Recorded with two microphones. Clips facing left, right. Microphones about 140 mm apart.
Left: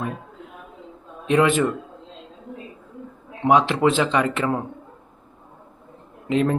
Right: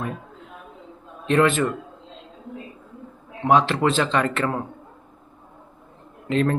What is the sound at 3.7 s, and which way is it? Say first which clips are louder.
Speech: left 2 dB; 15° left (ahead or behind).